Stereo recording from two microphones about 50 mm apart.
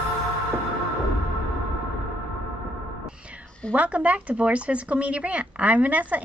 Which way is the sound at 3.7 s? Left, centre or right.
Right.